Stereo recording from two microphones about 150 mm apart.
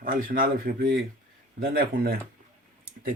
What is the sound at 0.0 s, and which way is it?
Speech, 70° right (ahead or behind).